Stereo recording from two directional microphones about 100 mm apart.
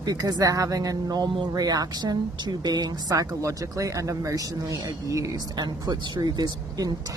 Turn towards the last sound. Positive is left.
turn(degrees=-40)  # may be behind; listen again after turning